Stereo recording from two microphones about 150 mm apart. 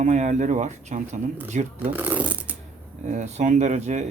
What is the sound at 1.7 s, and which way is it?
Speech, 10° right (ahead or behind).